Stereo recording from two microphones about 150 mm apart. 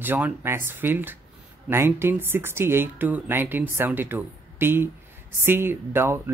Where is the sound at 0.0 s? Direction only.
15° right (ahead or behind).